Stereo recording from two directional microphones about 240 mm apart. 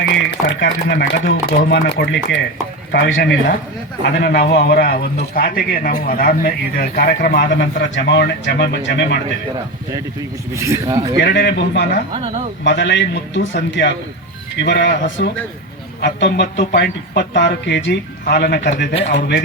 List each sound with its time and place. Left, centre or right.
0.4 s a man's voice: left
10.5 s speech: centre
11.2 s a man's voice: left
12.1 s speech: right
12.6 s a man's voice: left